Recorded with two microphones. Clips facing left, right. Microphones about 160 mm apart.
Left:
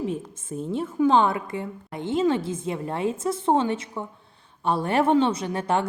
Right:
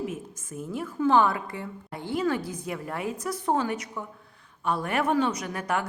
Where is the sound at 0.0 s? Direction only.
30° left (ahead or behind).